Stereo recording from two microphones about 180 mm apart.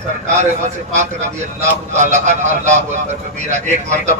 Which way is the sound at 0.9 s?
40° right (ahead or behind).